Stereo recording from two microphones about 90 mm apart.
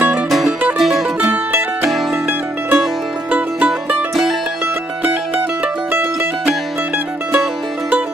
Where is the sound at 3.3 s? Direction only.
15° right (ahead or behind).